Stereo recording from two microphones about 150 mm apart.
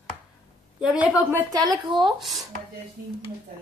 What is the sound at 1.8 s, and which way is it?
Speech, 30° right (ahead or behind).